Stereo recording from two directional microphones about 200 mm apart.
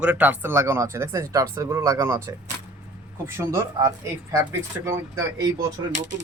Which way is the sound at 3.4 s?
15° right (ahead or behind).